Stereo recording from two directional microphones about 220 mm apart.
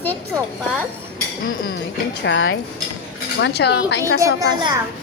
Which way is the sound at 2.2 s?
60° left (ahead or behind).